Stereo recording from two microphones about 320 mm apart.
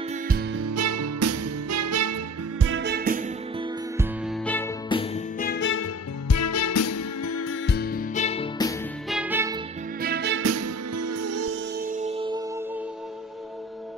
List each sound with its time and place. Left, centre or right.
0.6 s music: right
2.6 s music: right
4.5 s music: centre
5.4 s music: left; by 8.7 s centre
9.1 s music: centre
10.0 s music: right
10.5 s music: right
11.8 s music: right